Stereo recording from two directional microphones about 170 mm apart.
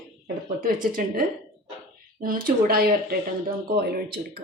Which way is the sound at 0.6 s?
55° right (ahead or behind).